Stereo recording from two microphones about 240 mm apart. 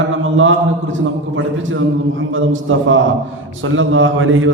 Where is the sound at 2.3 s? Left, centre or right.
Right.